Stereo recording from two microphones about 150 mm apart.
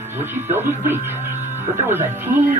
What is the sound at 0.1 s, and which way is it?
Speech, 15° right (ahead or behind).